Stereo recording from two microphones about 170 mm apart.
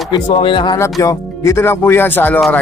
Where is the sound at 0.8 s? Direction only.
15° left (ahead or behind).